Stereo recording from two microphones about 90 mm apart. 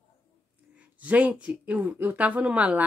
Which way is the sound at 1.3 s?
10° right (ahead or behind).